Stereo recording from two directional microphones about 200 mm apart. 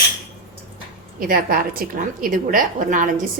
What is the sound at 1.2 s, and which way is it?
A woman's voice, 45° right (ahead or behind).